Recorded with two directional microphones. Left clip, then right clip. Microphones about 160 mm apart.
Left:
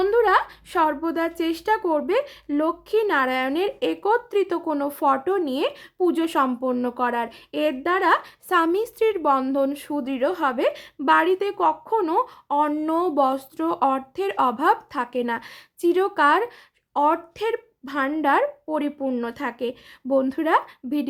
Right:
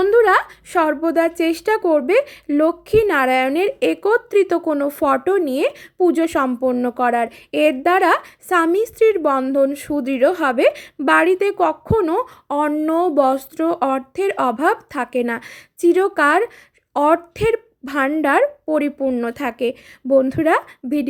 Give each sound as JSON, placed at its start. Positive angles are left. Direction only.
{"t": 0.0, "sound": "speech", "side_deg": -20}
{"t": 12.7, "sound": "a woman's voice", "side_deg": -15}
{"t": 19.0, "sound": "speech", "side_deg": -10}
{"t": 19.3, "sound": "speech", "side_deg": -25}